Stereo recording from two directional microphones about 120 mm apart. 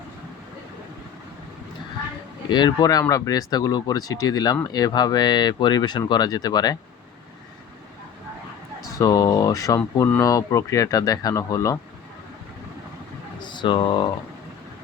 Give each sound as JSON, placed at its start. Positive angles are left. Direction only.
{"t": 2.5, "sound": "speech", "side_deg": 35}
{"t": 8.9, "sound": "speech", "side_deg": 30}
{"t": 13.4, "sound": "speech", "side_deg": 40}